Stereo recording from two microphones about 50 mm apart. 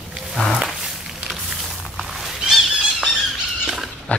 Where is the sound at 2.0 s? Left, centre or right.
Centre.